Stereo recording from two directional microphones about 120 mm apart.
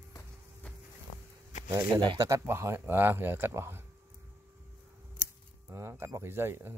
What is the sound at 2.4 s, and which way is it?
Speech, 20° right (ahead or behind).